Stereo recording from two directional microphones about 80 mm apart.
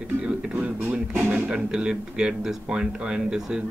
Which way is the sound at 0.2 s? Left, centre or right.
Centre.